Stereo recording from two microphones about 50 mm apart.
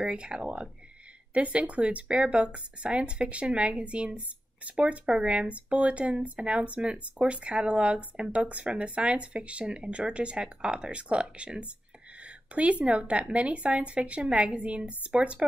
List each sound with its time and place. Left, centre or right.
0.0 s speech: right